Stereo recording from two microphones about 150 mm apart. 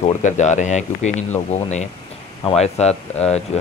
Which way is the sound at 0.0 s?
50° left (ahead or behind).